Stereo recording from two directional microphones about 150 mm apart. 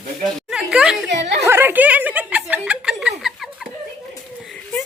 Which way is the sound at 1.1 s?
50° right (ahead or behind).